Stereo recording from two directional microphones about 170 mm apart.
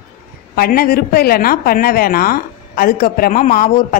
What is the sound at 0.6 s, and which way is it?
A woman's voice, 60° left (ahead or behind).